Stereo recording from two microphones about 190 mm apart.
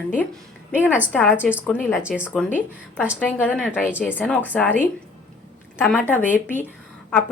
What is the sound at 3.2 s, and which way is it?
Speech, 10° left (ahead or behind).